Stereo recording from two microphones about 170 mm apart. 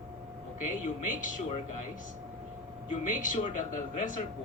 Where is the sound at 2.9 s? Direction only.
50° left (ahead or behind).